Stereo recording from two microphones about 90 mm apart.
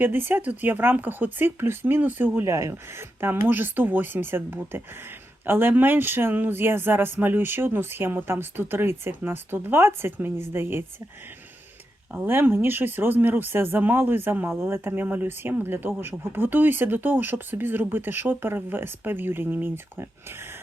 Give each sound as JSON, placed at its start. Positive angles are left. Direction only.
{"t": 0.0, "sound": "speech", "side_deg": -25}
{"t": 2.5, "sound": "speech", "side_deg": -35}
{"t": 12.1, "sound": "speech", "side_deg": -20}